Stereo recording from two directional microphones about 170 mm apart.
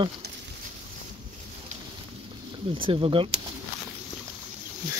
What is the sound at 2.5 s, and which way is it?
Speech, 30° right (ahead or behind).